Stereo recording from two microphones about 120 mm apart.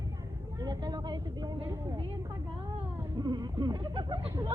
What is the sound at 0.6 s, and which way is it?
Speech, 35° right (ahead or behind).